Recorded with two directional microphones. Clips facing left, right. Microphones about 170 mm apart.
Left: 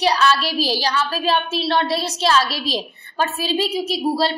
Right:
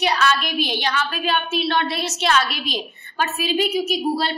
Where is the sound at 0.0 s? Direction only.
35° left (ahead or behind).